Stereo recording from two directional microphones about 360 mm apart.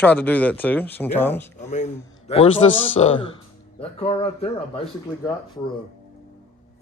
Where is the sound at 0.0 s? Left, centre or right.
Centre.